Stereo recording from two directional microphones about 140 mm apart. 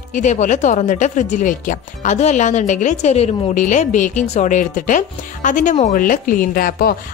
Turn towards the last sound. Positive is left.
turn(degrees=90)